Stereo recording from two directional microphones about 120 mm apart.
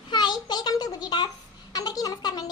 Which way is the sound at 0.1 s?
40° left (ahead or behind).